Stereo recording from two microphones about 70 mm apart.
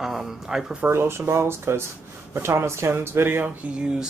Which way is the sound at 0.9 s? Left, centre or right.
Right.